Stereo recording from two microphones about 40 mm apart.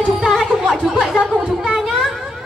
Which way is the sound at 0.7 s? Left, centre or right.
Centre.